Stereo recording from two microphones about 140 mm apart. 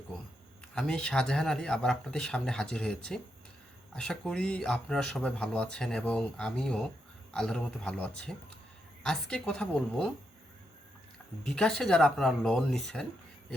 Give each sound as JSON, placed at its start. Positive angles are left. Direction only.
{"t": 0.8, "sound": "speech", "side_deg": 5}
{"t": 11.4, "sound": "speech", "side_deg": 5}